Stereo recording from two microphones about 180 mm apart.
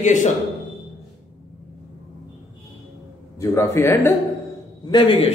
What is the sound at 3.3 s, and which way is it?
Speech, 15° left (ahead or behind).